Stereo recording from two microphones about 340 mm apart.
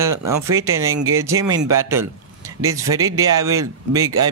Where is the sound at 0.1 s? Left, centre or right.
Right.